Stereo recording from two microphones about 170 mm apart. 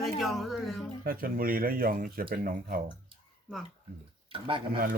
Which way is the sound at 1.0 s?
55° right (ahead or behind).